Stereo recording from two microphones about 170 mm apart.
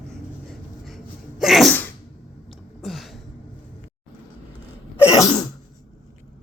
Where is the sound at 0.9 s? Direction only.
Centre (ahead or behind).